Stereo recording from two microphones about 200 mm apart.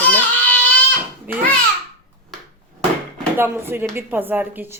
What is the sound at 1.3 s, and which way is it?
Speech, 10° right (ahead or behind).